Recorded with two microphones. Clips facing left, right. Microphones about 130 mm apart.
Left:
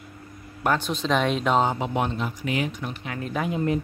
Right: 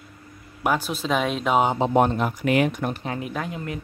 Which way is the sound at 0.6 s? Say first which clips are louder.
Even; 5° right (ahead or behind).